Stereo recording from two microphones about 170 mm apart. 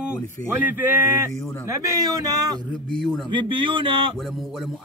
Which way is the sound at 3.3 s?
30° right (ahead or behind).